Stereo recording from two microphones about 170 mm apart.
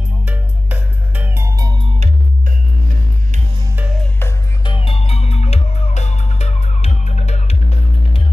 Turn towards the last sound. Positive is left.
turn(degrees=40)  # may be behind; listen again after turning